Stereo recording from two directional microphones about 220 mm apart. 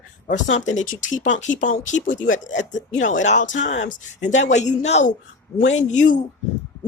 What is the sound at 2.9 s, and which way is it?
Speech, 60° left (ahead or behind).